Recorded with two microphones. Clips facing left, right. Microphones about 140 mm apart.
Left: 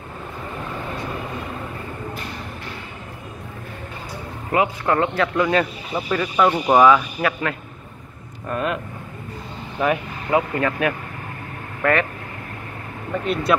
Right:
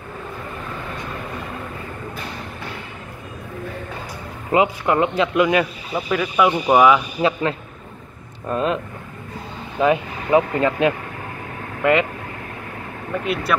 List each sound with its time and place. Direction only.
4.5 s speech: 20° right (ahead or behind)
6.0 s speech: centre (ahead or behind)
7.2 s a man's voice: 25° right (ahead or behind)
9.8 s speech: 20° right (ahead or behind)
13.2 s speech: 5° right (ahead or behind)